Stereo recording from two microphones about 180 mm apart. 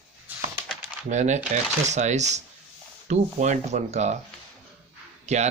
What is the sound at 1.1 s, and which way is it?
Speech, 40° right (ahead or behind).